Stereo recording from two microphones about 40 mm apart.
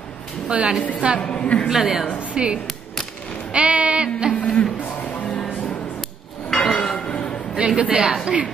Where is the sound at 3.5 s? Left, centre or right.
Right.